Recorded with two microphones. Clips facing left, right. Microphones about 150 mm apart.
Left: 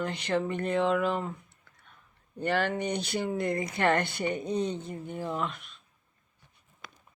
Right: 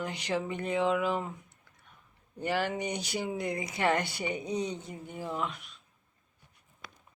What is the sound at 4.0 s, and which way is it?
Mantra, 55° left (ahead or behind).